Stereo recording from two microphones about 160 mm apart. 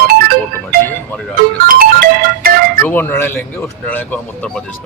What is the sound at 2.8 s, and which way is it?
A man's voice, 10° left (ahead or behind).